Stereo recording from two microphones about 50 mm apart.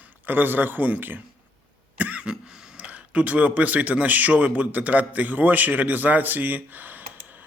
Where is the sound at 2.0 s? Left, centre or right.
Right.